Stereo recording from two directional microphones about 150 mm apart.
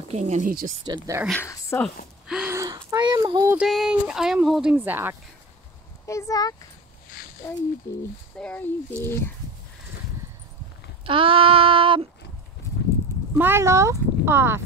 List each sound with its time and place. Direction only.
0.1 s speech: 50° right (ahead or behind)
0.8 s speech: 25° right (ahead or behind)
1.4 s speech: 20° left (ahead or behind)
2.2 s gasp: 5° right (ahead or behind)
2.5 s a sound: 20° right (ahead or behind)
3.5 s speech: centre (ahead or behind)
6.0 s speech: 20° left (ahead or behind)
8.4 s speech: 10° left (ahead or behind)
11.1 s child singing: 35° right (ahead or behind)
13.4 s speech: 15° right (ahead or behind)